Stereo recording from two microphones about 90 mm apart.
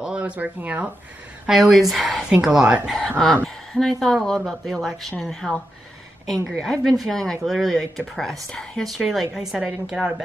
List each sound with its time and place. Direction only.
0.0 s speech: 10° right (ahead or behind)
1.5 s a woman's voice: 5° right (ahead or behind)
3.4 s a sound: 5° left (ahead or behind)
4.0 s a woman's voice: 5° left (ahead or behind)